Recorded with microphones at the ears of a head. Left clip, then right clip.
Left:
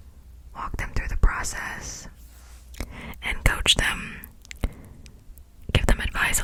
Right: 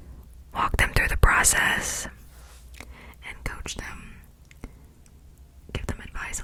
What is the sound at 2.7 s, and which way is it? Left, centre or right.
Whispering, left.